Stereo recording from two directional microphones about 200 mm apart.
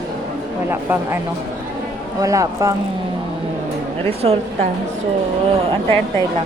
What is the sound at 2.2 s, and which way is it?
Speech, 15° right (ahead or behind).